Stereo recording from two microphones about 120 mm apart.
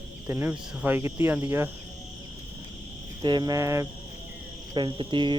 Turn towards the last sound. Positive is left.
turn(degrees=-45)  # may be behind; listen again after turning